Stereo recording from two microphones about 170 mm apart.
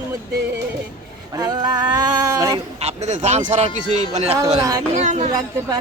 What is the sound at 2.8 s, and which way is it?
Speech, 40° right (ahead or behind).